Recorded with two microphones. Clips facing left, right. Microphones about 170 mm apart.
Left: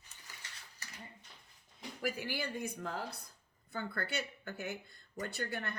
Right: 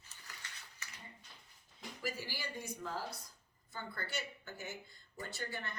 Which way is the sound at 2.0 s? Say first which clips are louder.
Left 5 dB; 60° left (ahead or behind).